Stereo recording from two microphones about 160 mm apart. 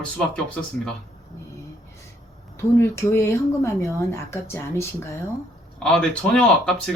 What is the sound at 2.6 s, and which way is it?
Speech, 15° left (ahead or behind).